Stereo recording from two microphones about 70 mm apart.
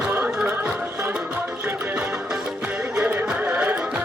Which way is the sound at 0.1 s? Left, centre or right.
Right.